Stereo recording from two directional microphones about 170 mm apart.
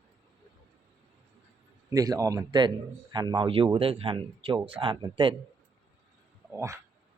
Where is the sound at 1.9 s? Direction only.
20° right (ahead or behind).